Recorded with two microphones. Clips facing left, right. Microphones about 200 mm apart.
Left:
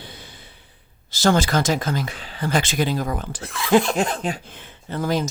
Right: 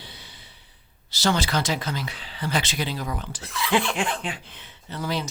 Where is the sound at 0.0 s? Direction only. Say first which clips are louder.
Left 5 dB; 50° left (ahead or behind).